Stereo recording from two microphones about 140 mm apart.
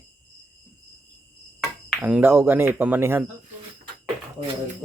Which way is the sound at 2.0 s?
15° right (ahead or behind).